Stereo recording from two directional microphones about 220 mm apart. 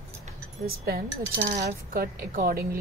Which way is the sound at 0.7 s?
45° right (ahead or behind).